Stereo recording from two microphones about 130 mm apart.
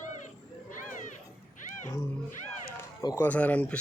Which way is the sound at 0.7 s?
85° left.